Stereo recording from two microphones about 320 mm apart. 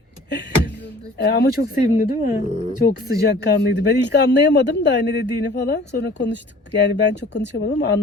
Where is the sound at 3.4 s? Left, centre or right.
Left.